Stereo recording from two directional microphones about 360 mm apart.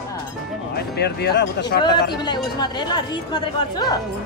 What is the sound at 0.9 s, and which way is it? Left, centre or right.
Speech, left.